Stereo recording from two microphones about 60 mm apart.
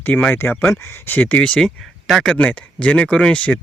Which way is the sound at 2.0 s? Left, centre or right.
Centre.